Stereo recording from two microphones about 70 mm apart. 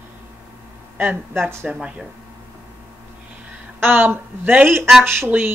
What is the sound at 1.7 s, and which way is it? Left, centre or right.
Speech, centre.